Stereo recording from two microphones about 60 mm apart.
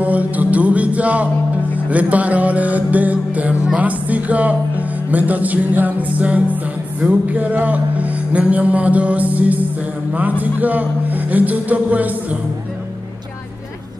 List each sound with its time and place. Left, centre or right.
0.0 s music: right
1.9 s a man's voice: right